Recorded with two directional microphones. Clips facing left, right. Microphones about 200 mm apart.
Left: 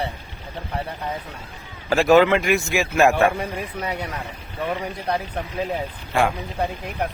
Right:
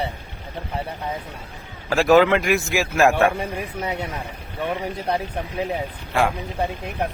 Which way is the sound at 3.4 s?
25° right (ahead or behind).